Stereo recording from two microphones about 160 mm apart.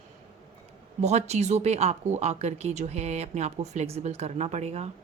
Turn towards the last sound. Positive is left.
turn(degrees=-40)  # may be behind; listen again after turning